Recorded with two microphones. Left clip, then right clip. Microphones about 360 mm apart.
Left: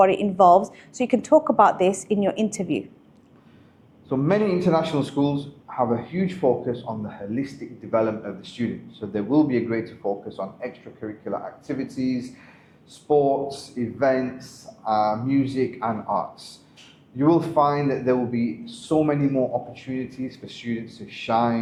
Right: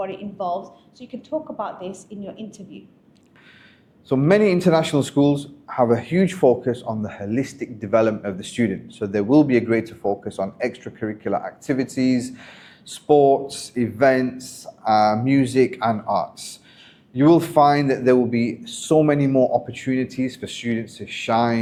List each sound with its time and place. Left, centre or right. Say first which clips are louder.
0.0 s speech: left 11 dB; left
4.1 s a man's voice: right 5 dB; right